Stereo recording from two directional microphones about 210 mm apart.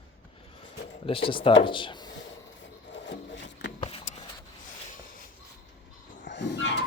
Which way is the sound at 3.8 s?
25° left (ahead or behind).